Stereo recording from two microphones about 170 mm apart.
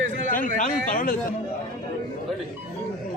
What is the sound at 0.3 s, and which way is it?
Speech, 50° left (ahead or behind).